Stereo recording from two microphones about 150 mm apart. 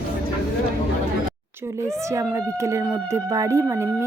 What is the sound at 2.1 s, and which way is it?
Speech, 20° right (ahead or behind).